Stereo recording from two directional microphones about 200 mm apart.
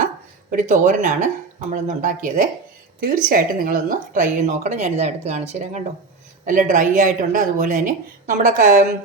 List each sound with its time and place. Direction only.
0.5 s speech: 40° right (ahead or behind)